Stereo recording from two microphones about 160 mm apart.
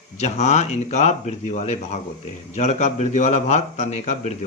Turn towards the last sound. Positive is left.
turn(degrees=45)  # may be behind; listen again after turning